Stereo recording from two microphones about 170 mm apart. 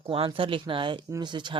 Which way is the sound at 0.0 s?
30° right (ahead or behind).